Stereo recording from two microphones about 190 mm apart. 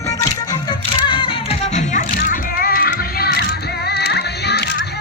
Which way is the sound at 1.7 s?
45° left (ahead or behind).